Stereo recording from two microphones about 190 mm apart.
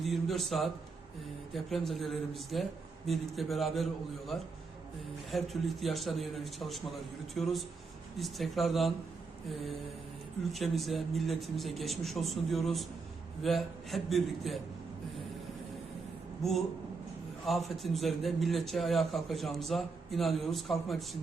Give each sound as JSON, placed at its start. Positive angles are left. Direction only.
{"t": 0.0, "sound": "a man's voice", "side_deg": 0}
{"t": 5.3, "sound": "a man's voice", "side_deg": 0}
{"t": 10.5, "sound": "a man's voice", "side_deg": 0}
{"t": 16.4, "sound": "a man's voice", "side_deg": 0}